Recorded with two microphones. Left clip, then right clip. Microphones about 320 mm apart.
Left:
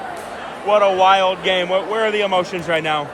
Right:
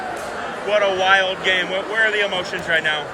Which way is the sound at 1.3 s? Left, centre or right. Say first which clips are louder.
Left 2 dB; centre.